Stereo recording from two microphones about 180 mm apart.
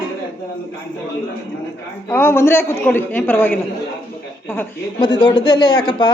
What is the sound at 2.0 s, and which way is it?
A man's voice, 15° left (ahead or behind).